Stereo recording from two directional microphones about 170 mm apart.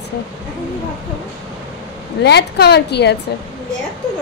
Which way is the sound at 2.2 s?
80° left.